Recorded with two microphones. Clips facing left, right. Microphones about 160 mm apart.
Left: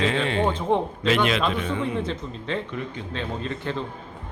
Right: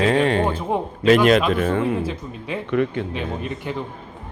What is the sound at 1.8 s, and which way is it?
Speech, 10° right (ahead or behind).